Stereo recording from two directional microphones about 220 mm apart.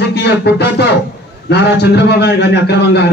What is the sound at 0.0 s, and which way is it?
Music, 50° left (ahead or behind).